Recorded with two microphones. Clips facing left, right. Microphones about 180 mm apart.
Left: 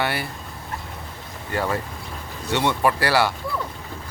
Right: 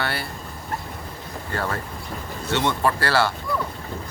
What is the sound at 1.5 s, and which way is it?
Speech, 15° left (ahead or behind).